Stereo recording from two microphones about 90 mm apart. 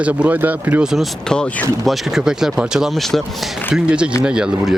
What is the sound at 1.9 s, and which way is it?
Speech, centre (ahead or behind).